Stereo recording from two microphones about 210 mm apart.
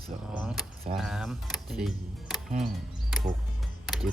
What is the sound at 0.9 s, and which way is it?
Speech, centre (ahead or behind).